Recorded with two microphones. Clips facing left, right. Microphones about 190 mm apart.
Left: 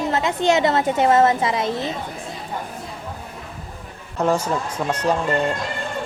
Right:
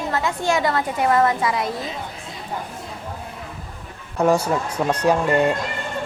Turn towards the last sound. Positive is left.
turn(degrees=-10)  # may be behind; listen again after turning